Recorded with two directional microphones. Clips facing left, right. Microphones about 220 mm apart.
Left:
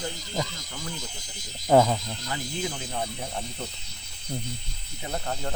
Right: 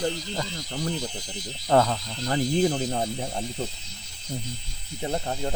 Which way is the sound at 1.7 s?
10° left (ahead or behind).